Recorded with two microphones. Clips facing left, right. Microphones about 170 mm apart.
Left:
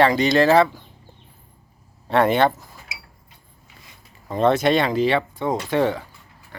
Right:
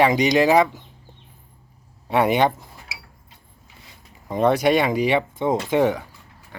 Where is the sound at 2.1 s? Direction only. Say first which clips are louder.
Left 1 dB; 10° right (ahead or behind).